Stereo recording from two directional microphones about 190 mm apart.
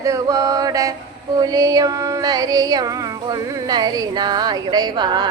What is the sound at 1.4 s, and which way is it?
Music, 20° right (ahead or behind).